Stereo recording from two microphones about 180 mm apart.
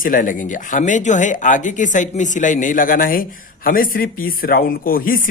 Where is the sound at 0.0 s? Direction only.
50° left (ahead or behind).